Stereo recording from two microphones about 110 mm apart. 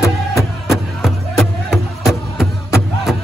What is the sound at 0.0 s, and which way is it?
Music, 25° left (ahead or behind).